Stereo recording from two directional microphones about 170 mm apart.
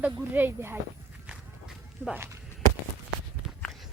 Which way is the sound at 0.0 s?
10° right (ahead or behind).